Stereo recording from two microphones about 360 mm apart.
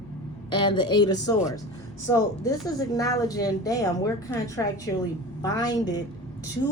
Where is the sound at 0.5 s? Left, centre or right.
Centre.